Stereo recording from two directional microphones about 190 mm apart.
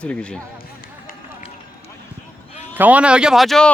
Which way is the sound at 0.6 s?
50° left (ahead or behind).